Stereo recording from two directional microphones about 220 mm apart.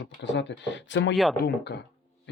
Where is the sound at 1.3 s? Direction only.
45° left (ahead or behind).